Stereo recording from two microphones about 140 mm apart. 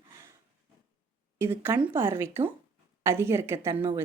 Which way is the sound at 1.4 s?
15° right (ahead or behind).